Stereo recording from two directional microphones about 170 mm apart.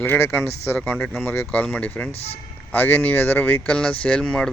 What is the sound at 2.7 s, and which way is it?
Speech, 10° left (ahead or behind).